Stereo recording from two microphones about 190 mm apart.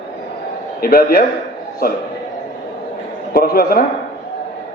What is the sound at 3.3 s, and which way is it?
Speech, 50° left (ahead or behind).